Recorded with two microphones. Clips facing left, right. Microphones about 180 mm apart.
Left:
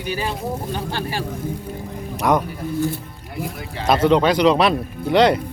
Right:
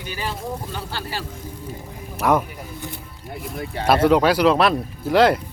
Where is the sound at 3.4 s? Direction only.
5° right (ahead or behind).